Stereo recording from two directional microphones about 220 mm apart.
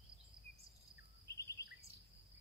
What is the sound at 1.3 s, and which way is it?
Bird vocalization, 15° left (ahead or behind).